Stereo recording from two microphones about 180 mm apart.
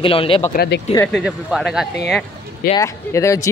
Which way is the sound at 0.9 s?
10° left (ahead or behind).